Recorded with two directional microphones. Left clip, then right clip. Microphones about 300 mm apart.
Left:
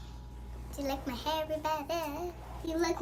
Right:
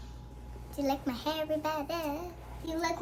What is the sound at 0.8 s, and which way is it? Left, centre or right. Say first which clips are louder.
A woman's voice: right 4 dB; centre.